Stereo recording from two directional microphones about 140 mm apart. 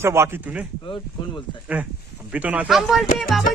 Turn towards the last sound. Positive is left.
turn(degrees=0)  # may be behind; listen again after turning